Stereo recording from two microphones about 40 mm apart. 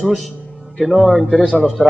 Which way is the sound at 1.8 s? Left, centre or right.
Left.